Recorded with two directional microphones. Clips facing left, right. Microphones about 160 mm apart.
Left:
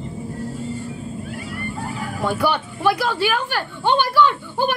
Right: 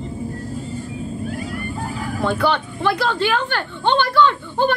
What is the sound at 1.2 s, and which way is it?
Vehicle, 40° right (ahead or behind).